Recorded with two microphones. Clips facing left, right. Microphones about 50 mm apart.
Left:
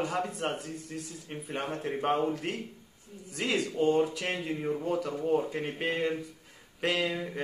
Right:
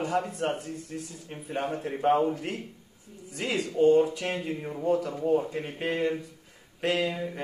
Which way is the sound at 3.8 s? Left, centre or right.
Centre.